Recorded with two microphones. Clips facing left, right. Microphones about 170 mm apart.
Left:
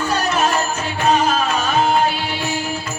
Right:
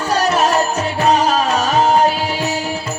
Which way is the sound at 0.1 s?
35° right (ahead or behind).